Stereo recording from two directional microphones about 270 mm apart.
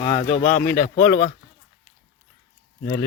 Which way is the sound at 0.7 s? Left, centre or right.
Left.